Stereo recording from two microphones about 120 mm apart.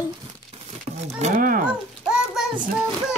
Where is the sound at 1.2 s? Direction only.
90° right.